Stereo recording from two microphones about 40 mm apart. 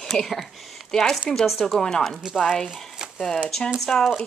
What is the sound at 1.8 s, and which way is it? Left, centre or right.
Speech, centre.